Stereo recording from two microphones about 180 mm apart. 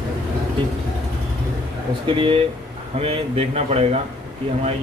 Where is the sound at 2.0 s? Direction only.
30° right (ahead or behind).